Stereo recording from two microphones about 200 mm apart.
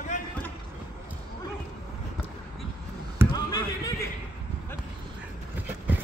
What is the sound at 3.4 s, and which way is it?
Basketball bounce, 20° left (ahead or behind).